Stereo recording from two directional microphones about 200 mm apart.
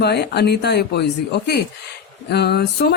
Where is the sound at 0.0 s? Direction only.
55° left (ahead or behind).